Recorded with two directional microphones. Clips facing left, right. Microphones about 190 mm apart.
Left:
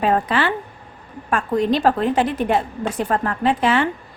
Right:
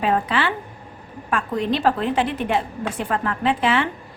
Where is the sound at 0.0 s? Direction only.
45° left (ahead or behind).